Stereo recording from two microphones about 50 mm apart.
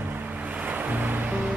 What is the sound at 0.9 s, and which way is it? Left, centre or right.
Music, right.